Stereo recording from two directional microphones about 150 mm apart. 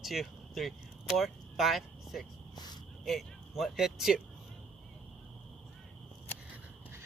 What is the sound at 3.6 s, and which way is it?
Speech, centre (ahead or behind).